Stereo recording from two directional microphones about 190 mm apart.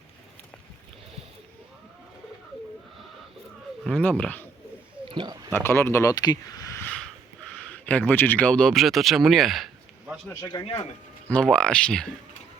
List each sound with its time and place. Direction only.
4.1 s speech: 10° left (ahead or behind)
5.0 s a sound: 25° right (ahead or behind)
5.5 s speech: 10° left (ahead or behind)
7.7 s speech: 10° left (ahead or behind)
10.4 s speech: 25° left (ahead or behind)
11.3 s speech: 5° left (ahead or behind)